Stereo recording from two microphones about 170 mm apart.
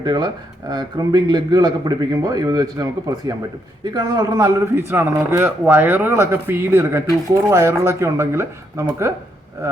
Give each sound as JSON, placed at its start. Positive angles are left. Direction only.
{"t": 0.0, "sound": "a man's voice", "side_deg": -25}